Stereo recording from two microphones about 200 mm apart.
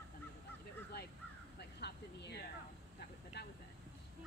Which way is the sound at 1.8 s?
55° left (ahead or behind).